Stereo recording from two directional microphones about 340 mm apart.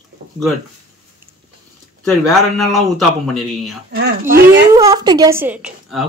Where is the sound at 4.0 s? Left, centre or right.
Right.